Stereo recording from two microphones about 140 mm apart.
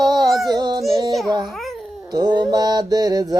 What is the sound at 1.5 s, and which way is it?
Babbling, centre (ahead or behind).